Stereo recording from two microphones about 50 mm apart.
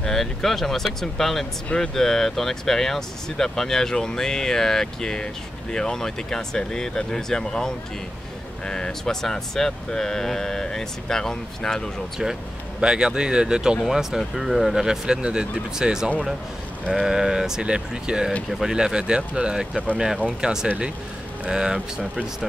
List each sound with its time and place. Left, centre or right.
0.0 s speech: centre
12.8 s speech: centre